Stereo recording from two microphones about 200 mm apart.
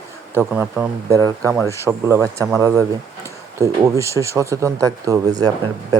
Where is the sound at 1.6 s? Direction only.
15° right (ahead or behind).